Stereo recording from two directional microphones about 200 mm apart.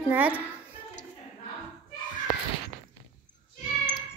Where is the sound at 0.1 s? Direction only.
10° right (ahead or behind).